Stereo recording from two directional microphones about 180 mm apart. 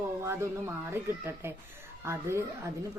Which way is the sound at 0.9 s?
15° right (ahead or behind).